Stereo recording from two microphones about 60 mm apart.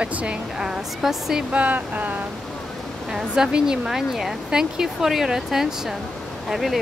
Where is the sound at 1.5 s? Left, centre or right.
Right.